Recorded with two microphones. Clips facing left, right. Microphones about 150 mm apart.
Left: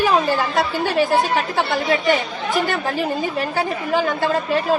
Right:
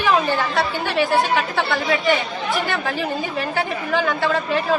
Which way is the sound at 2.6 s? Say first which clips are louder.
Left 2 dB; 45° left (ahead or behind).